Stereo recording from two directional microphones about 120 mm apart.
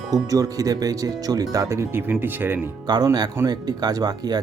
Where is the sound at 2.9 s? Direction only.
35° right (ahead or behind).